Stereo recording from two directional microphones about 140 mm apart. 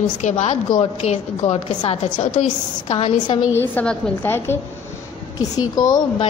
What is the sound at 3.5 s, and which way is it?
A woman's voice, 10° left (ahead or behind).